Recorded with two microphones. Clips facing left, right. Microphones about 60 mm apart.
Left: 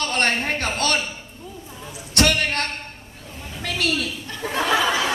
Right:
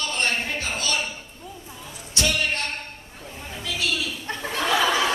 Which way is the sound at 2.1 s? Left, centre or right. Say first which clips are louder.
Left 5 dB; left.